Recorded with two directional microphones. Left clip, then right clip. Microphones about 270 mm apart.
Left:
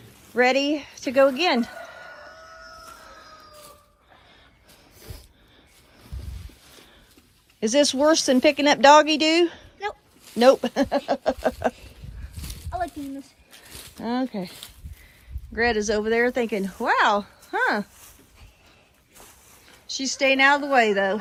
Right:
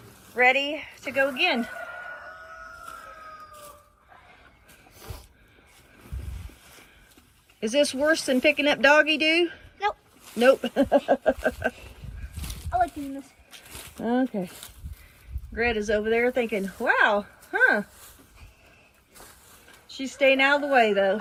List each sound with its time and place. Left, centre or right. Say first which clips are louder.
0.4 s a woman's voice: right 1 dB; left
0.7 s speech: left 5 dB; left
1.1 s speech: left 5 dB; centre
4.9 s a sound: right 2 dB; centre
6.3 s boat: even; centre
7.6 s speech: left 3 dB; centre
8.3 s speech: left 3 dB; left
8.6 s speech: left 6 dB; centre
9.4 s a sound: left 2 dB; centre
10.4 s speech: left 3 dB; left
10.8 s speech: right 2 dB; centre
11.7 s a sound: even; centre
15.5 s speech: left 2 dB; centre
19.9 s speech: even; centre